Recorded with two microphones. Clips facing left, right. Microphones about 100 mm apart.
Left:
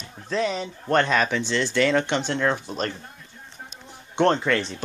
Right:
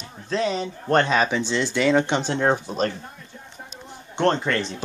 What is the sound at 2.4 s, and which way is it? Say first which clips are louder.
Speech: right 3 dB; 30° right (ahead or behind).